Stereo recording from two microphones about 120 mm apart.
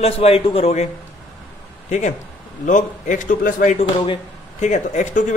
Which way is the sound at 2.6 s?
90° left.